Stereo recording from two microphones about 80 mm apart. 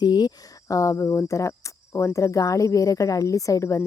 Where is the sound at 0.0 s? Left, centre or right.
Left.